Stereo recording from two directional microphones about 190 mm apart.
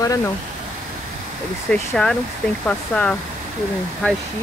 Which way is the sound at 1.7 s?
5° left (ahead or behind).